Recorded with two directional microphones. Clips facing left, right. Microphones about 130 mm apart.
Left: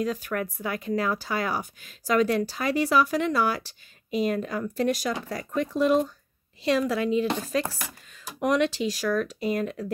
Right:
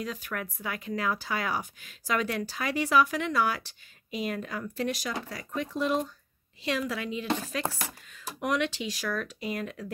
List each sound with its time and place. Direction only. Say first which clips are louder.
0.0 s speech: left 7 dB; 45° left (ahead or behind)